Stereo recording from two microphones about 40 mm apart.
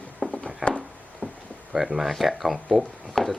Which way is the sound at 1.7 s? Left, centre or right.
Centre.